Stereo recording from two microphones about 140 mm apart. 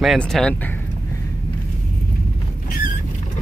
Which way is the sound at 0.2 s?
5° left (ahead or behind).